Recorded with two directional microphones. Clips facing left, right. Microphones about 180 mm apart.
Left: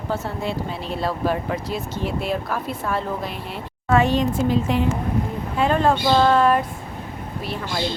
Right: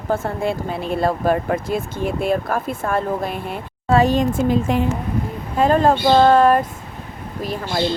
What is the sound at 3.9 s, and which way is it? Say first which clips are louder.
Speech: right 3 dB; 40° right (ahead or behind).